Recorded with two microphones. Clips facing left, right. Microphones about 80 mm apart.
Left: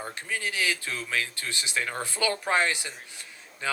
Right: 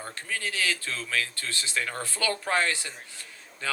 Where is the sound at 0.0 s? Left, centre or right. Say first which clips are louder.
Left 1 dB; centre.